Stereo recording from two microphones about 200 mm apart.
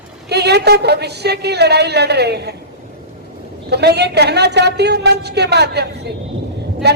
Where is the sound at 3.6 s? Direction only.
55° right (ahead or behind).